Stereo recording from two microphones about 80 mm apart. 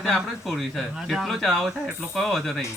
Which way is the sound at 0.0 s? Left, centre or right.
Centre.